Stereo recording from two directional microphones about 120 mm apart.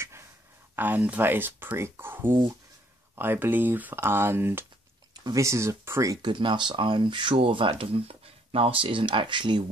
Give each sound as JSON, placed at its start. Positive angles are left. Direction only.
{"t": 0.7, "sound": "speech", "side_deg": -15}
{"t": 6.2, "sound": "speech", "side_deg": -40}